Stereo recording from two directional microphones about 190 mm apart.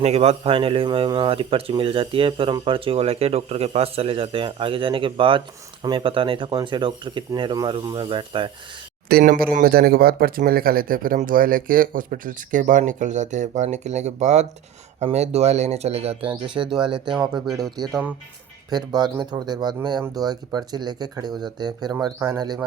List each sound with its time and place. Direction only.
0.0 s speech: 30° right (ahead or behind)
9.0 s speech: 50° right (ahead or behind); by 16.3 s 35° right (ahead or behind)
16.6 s speech: 20° right (ahead or behind)
17.1 s speech: 5° right (ahead or behind)
17.6 s speech: 20° right (ahead or behind)